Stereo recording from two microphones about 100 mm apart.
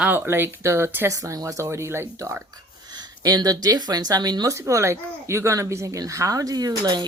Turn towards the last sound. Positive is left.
turn(degrees=-45)  # may be behind; listen again after turning